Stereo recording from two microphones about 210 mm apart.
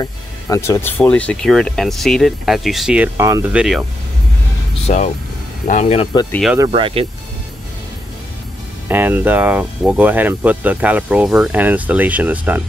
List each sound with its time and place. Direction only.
0.0 s speech: 15° left (ahead or behind); by 3.6 s 15° right (ahead or behind)
4.8 s speech: 30° left (ahead or behind)
6.7 s speech: 25° right (ahead or behind)
8.8 s speech: 10° right (ahead or behind)